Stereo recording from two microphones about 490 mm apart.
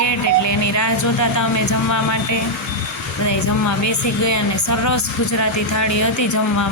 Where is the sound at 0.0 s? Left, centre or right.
Left.